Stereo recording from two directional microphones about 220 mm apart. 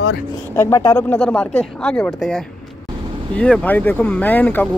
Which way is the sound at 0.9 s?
5° left (ahead or behind).